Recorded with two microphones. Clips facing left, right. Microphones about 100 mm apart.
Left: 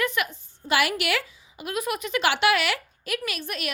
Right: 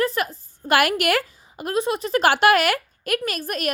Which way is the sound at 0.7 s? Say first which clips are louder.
Right 5 dB; 50° right (ahead or behind).